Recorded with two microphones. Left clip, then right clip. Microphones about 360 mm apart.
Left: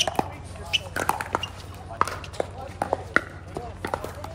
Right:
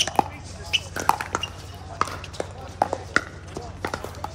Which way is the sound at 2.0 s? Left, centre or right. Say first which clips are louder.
Left 1 dB; left.